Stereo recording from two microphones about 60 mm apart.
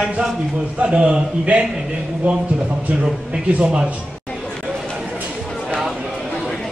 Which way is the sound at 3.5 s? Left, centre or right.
Centre.